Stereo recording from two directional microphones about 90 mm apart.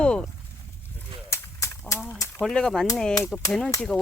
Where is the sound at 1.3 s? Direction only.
30° left (ahead or behind).